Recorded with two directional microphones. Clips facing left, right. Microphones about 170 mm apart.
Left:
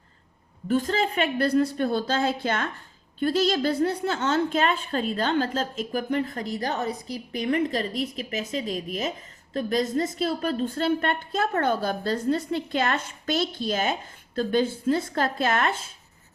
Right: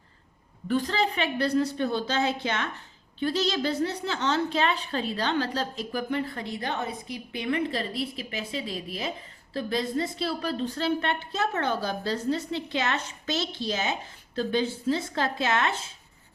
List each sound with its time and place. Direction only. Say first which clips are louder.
0.7 s a woman's voice: left 2 dB; 45° left (ahead or behind)
9.6 s a woman's voice: left 4 dB; 30° right (ahead or behind)
9.9 s a woman's voice: left 3 dB; 45° left (ahead or behind)